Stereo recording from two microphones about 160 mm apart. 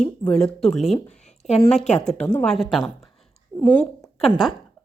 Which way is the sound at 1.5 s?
45° left (ahead or behind).